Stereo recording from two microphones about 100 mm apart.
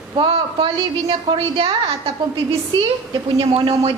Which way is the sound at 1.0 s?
75° right (ahead or behind).